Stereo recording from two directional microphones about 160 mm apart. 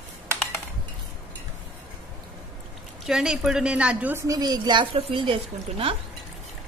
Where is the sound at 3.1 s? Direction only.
5° right (ahead or behind).